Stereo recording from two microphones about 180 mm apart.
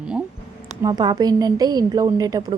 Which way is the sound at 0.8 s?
20° right (ahead or behind).